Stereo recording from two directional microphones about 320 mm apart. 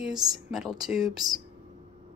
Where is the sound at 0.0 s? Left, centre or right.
Centre.